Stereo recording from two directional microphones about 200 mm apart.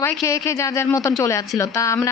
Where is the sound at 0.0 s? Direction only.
15° left (ahead or behind).